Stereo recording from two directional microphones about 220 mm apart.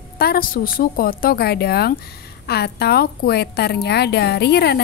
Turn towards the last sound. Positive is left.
turn(degrees=50)  # may be behind; listen again after turning